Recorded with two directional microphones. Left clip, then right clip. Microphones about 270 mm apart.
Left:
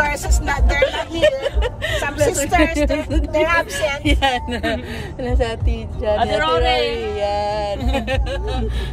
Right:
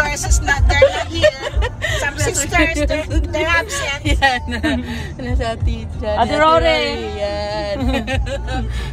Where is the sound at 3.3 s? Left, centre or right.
Left.